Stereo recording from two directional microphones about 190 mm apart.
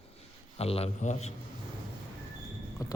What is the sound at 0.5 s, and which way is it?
Speech, 30° left (ahead or behind).